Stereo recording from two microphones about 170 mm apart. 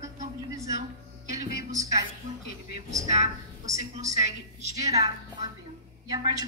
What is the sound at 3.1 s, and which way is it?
A woman's voice, 40° right (ahead or behind).